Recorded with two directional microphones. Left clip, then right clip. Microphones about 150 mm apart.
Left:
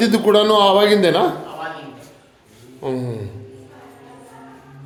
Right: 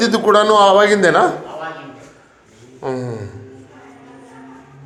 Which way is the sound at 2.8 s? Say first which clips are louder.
Right 1 dB; 40° left (ahead or behind).